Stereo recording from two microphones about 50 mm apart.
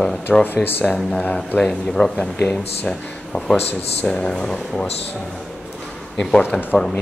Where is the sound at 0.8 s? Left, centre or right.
Centre.